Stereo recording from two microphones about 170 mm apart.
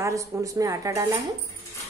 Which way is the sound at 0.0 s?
20° right (ahead or behind).